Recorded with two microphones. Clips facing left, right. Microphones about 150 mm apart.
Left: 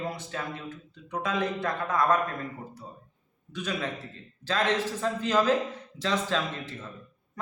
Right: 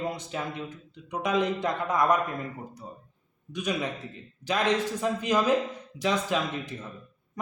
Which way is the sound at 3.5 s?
15° right (ahead or behind).